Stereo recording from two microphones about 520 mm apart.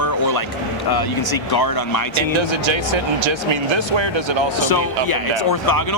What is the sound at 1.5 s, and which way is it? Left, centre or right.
Speech, left.